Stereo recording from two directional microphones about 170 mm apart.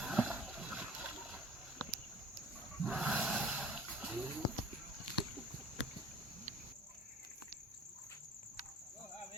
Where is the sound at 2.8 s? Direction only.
5° right (ahead or behind).